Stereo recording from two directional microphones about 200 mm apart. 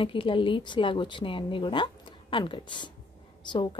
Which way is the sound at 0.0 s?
25° left (ahead or behind).